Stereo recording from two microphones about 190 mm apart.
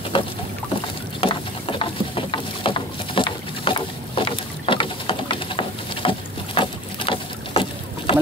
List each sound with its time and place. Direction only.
0.1 s boat: 30° left (ahead or behind)